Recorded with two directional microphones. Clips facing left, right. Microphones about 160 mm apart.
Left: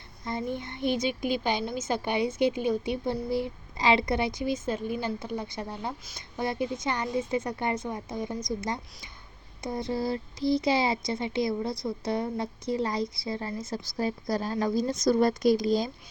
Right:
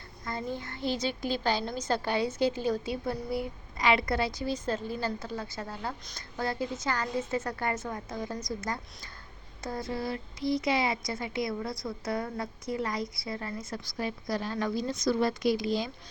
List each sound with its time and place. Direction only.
0.3 s a child's voice: 20° left (ahead or behind)
9.6 s a child's voice: 25° left (ahead or behind); by 15.9 s 40° left (ahead or behind)